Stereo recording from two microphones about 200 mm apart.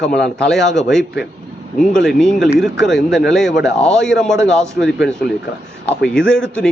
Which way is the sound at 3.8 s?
Centre (ahead or behind).